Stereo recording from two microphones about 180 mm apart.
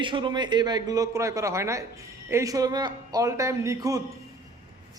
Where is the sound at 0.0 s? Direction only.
25° right (ahead or behind).